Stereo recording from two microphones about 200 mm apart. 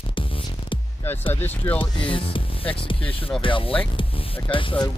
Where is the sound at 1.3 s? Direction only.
10° left (ahead or behind).